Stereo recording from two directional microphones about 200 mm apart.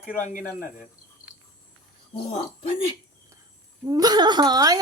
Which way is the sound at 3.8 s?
20° right (ahead or behind).